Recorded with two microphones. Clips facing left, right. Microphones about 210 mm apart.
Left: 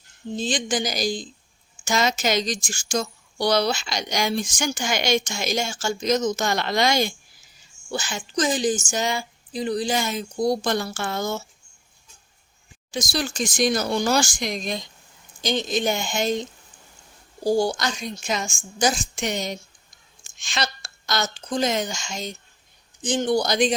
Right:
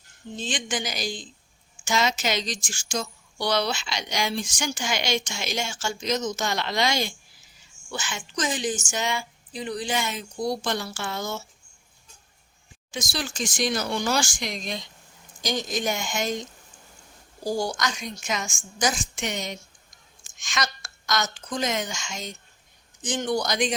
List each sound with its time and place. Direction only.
0.3 s speech: 35° left (ahead or behind)
7.9 s speech: 35° left (ahead or behind)
12.9 s speech: 35° left (ahead or behind)
15.4 s a woman's voice: 25° left (ahead or behind)